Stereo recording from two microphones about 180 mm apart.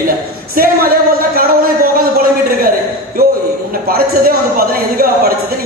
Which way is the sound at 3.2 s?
55° right (ahead or behind).